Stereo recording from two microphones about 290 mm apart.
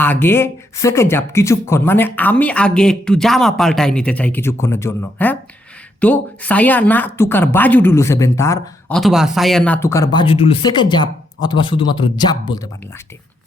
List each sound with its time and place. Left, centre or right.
0.0 s a woman's voice: centre